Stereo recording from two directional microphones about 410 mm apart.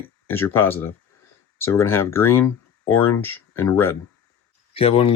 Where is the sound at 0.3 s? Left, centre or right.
Centre.